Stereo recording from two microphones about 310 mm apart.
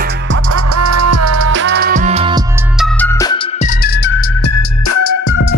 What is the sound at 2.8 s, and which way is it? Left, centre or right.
Music, centre.